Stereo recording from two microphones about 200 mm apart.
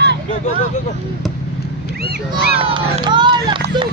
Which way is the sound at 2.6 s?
30° right (ahead or behind).